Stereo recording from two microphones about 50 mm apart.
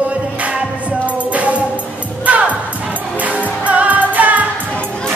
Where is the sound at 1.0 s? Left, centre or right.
Right.